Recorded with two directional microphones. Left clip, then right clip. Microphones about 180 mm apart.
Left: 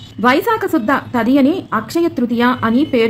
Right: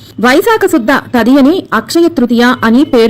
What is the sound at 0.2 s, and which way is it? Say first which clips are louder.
Speech: right 6 dB; 40° right (ahead or behind).